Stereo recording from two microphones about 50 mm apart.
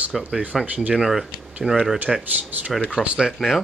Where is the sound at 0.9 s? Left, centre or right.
Centre.